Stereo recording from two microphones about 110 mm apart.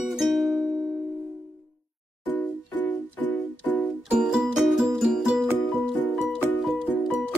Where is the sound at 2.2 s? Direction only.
15° left (ahead or behind).